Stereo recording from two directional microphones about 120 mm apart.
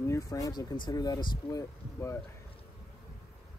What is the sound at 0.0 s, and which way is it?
Speech, 25° left (ahead or behind).